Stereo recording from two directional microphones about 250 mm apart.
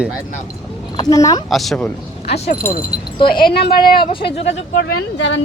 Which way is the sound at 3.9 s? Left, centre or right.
Centre.